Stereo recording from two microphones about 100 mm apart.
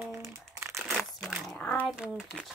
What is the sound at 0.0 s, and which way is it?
Crumpling, 25° right (ahead or behind).